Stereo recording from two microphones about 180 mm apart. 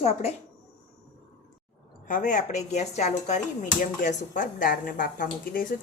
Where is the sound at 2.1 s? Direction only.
45° left (ahead or behind).